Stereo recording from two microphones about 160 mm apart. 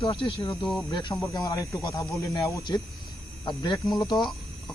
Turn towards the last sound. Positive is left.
turn(degrees=30)  # may be behind; listen again after turning